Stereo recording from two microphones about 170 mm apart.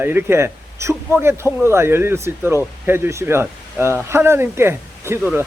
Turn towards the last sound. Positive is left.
turn(degrees=-15)  # may be behind; listen again after turning